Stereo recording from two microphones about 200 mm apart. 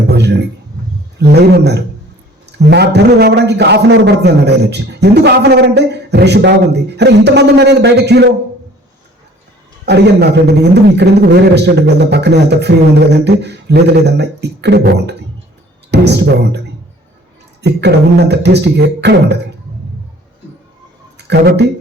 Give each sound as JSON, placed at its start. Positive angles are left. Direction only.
{"t": 0.1, "sound": "a sound", "side_deg": -55}
{"t": 1.2, "sound": "a man's voice", "side_deg": -55}
{"t": 9.8, "sound": "a man's voice", "side_deg": -55}
{"t": 17.6, "sound": "a man's voice", "side_deg": -60}
{"t": 21.2, "sound": "speech", "side_deg": -55}